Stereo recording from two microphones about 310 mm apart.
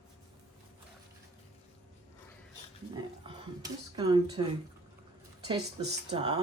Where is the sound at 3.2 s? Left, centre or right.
Centre.